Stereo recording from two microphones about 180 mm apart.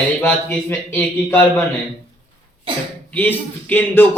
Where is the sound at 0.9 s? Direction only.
10° left (ahead or behind).